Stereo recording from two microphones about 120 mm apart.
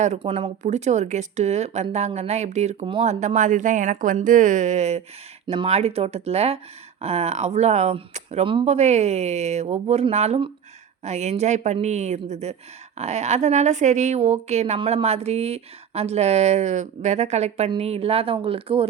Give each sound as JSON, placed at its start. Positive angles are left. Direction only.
{"t": 0.0, "sound": "speech", "side_deg": -65}